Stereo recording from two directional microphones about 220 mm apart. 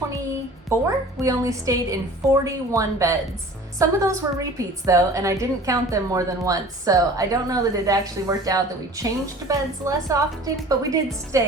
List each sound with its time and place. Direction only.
0.9 s a woman's voice: 15° right (ahead or behind)